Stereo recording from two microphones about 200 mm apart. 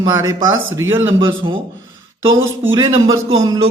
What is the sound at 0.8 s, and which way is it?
Speech, 10° right (ahead or behind).